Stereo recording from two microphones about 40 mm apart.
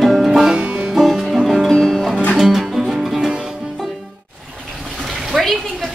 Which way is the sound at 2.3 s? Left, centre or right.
Centre.